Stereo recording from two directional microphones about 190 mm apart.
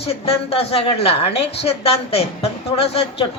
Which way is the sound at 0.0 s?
30° left (ahead or behind).